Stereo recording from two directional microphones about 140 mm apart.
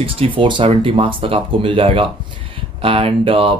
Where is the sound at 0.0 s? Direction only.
40° right (ahead or behind).